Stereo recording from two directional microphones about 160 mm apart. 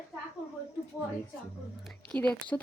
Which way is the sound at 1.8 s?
5° left (ahead or behind).